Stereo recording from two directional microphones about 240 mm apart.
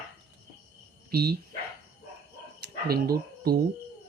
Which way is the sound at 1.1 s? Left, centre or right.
Right.